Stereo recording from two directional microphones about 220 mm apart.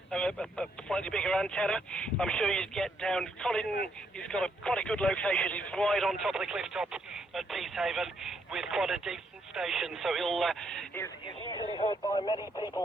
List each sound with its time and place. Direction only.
0.1 s speech: 5° left (ahead or behind)
11.0 s speech: 20° left (ahead or behind)